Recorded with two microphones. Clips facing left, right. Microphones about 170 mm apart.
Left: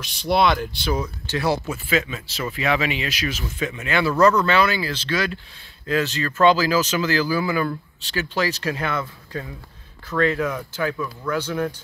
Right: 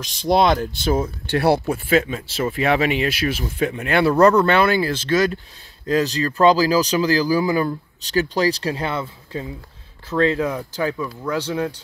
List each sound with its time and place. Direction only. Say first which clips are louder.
0.0 s speech: right 2 dB; 40° right (ahead or behind)
1.2 s speech: right 6 dB; 60° right (ahead or behind); by 11.7 s 25° right (ahead or behind)